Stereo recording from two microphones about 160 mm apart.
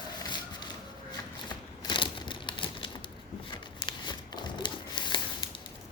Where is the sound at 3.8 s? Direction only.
30° left (ahead or behind).